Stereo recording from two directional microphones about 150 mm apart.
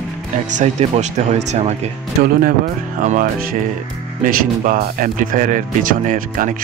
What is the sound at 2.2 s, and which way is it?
Speech, 75° right (ahead or behind).